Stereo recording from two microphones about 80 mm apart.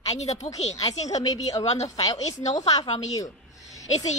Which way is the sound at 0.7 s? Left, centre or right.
Left.